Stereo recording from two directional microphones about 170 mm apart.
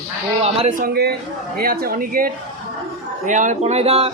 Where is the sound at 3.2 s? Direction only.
45° right (ahead or behind).